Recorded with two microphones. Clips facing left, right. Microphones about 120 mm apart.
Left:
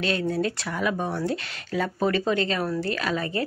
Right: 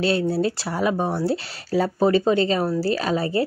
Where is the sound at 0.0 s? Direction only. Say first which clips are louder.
Right 4 dB; 30° right (ahead or behind).